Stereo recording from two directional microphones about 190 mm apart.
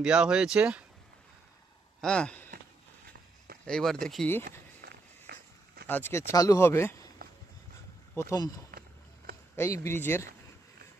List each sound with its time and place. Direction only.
0.0 s speech: 5° right (ahead or behind)
2.0 s speech: 5° left (ahead or behind)
3.6 s speech: 5° left (ahead or behind)
4.5 s walk: 55° right (ahead or behind)
5.9 s speech: 10° left (ahead or behind)
8.1 s speech: 15° left (ahead or behind)
8.7 s a sound: 50° right (ahead or behind)
9.6 s speech: 10° left (ahead or behind)